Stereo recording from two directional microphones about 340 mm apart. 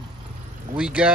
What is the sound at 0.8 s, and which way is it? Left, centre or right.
Speech, centre.